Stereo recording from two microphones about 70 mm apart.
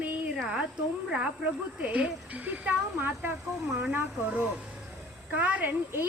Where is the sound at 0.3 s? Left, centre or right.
Centre.